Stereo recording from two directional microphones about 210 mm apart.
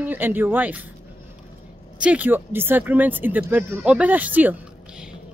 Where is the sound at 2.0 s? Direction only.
5° right (ahead or behind).